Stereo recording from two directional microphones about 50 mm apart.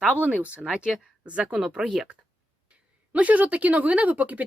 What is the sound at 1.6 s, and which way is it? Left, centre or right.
Speech, centre.